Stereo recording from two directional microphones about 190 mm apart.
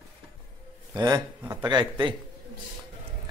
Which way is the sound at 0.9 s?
20° right (ahead or behind).